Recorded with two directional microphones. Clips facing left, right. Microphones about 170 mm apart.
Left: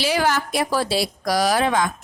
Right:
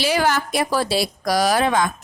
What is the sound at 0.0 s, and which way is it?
A woman's voice, 50° right (ahead or behind).